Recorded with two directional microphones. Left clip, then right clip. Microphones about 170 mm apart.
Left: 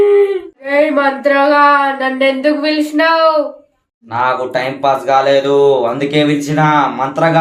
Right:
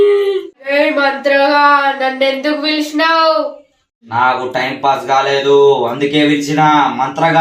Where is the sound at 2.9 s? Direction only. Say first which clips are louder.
Even; 10° left (ahead or behind).